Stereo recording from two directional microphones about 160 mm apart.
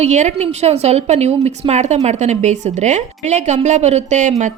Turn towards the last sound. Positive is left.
turn(degrees=-50)  # may be behind; listen again after turning